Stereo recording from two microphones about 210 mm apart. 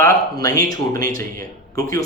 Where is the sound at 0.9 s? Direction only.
40° right (ahead or behind).